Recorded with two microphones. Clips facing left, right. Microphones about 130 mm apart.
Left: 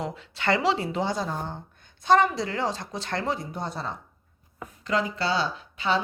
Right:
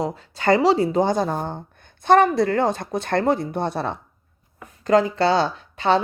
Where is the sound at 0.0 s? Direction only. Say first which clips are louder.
Right 6 dB; 40° right (ahead or behind); by 3.9 s 65° right (ahead or behind).